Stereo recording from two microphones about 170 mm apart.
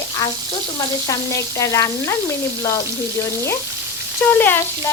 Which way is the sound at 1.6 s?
20° left (ahead or behind).